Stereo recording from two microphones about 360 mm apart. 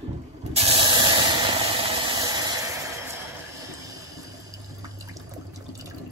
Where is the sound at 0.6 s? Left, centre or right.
Centre.